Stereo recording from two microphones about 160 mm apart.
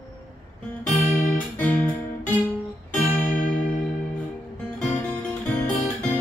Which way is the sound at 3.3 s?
60° left (ahead or behind).